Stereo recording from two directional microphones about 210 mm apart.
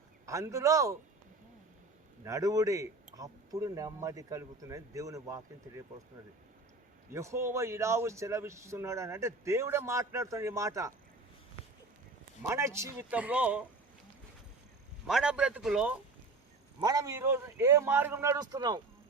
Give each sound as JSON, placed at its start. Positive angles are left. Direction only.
{"t": 0.3, "sound": "speech", "side_deg": -15}
{"t": 2.2, "sound": "speech", "side_deg": -15}
{"t": 7.1, "sound": "speech", "side_deg": -15}
{"t": 12.4, "sound": "speech", "side_deg": -10}
{"t": 15.0, "sound": "a man's voice", "side_deg": -5}
{"t": 16.8, "sound": "speech", "side_deg": -15}